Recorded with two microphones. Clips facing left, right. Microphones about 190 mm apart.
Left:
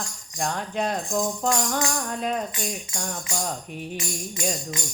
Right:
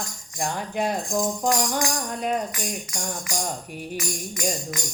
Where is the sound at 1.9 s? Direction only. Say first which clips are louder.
Right 1 dB; centre (ahead or behind).